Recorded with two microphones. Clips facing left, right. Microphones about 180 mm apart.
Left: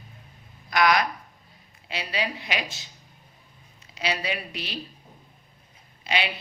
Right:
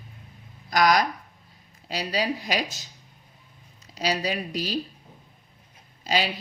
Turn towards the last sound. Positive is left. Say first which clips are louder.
# right 3 dB
turn(degrees=-40)  # may be behind; listen again after turning